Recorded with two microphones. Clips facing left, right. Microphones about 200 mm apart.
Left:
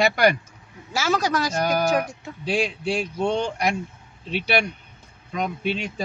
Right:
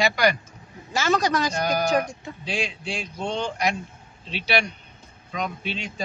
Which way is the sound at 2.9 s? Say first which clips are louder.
Left 6 dB; 55° left (ahead or behind).